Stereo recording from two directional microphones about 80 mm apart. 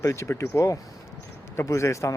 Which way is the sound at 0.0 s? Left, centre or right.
Left.